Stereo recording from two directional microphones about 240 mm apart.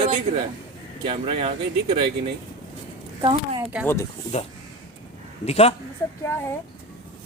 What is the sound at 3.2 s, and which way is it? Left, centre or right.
Speech, centre.